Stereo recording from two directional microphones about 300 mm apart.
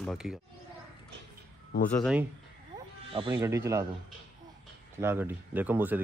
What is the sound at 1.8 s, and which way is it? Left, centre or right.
Speech, centre.